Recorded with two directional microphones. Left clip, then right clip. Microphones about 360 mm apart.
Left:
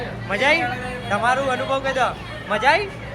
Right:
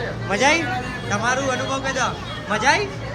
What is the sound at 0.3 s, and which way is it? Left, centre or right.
A man's voice, centre.